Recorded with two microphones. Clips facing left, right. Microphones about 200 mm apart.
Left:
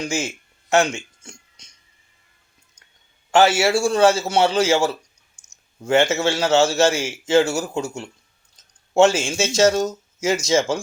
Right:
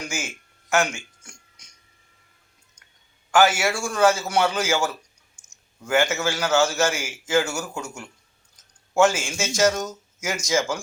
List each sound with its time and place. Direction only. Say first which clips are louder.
0.0 s a sound: left 7 dB; 30° left (ahead or behind)
3.3 s a man's voice: left 4 dB; 25° left (ahead or behind)
5.4 s clicking: right 2 dB; 10° left (ahead or behind)
5.8 s a man's voice: left 4 dB; 25° left (ahead or behind)